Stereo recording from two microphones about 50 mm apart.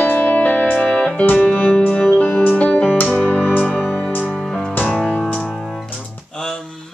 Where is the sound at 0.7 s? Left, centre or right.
Centre.